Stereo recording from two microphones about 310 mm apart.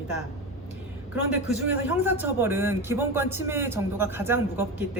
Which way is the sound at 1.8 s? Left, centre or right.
Centre.